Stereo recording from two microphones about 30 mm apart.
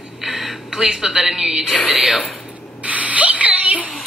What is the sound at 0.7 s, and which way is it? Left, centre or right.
A woman's voice, centre.